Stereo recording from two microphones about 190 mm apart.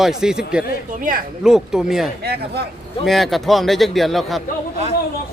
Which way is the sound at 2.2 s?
55° right (ahead or behind).